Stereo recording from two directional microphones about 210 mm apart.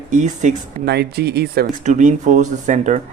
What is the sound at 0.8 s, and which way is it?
Speech, 50° right (ahead or behind).